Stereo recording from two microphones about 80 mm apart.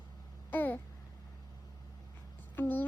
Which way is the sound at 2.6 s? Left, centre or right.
Left.